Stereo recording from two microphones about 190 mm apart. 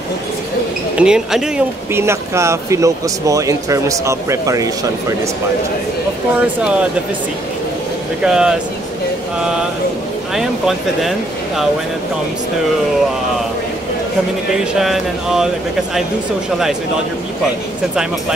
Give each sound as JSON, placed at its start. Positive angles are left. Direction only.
{"t": 0.9, "sound": "speech", "side_deg": -5}
{"t": 6.4, "sound": "speech", "side_deg": -5}
{"t": 8.2, "sound": "speech", "side_deg": -5}
{"t": 10.3, "sound": "speech", "side_deg": 0}
{"t": 14.8, "sound": "speech", "side_deg": 0}